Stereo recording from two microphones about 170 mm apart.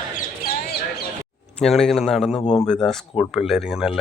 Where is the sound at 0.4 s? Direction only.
60° left (ahead or behind).